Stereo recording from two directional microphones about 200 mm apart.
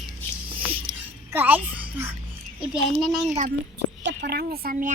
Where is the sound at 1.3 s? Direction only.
10° right (ahead or behind).